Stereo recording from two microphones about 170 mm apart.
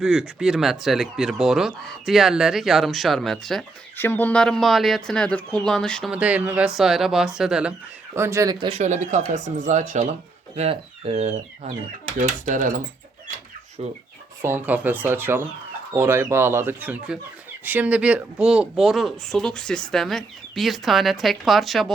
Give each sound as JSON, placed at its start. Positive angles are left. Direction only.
{"t": 0.0, "sound": "speech", "side_deg": -5}
{"t": 3.9, "sound": "speech", "side_deg": 10}
{"t": 6.1, "sound": "speech", "side_deg": -10}
{"t": 8.1, "sound": "speech", "side_deg": -15}
{"t": 8.5, "sound": "speech", "side_deg": -35}
{"t": 13.8, "sound": "chicken", "side_deg": -35}
{"t": 14.4, "sound": "speech", "side_deg": -10}